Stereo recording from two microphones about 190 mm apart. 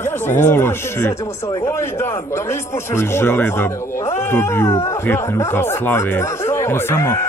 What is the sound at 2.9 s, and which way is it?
Speech, 15° left (ahead or behind).